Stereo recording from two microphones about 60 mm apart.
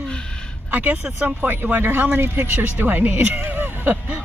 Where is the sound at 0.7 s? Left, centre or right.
Right.